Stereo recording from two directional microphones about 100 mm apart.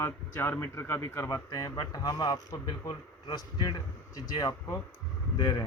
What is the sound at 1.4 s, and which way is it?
A man's voice, 35° left (ahead or behind).